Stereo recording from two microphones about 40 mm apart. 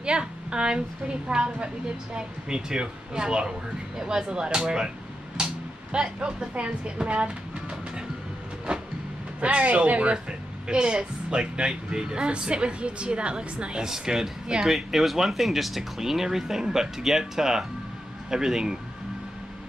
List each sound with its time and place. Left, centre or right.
0.0 s speech: right
5.4 s music: right
6.5 s speech: right
8.7 s vehicle: right
9.4 s speech: right
13.8 s speech: centre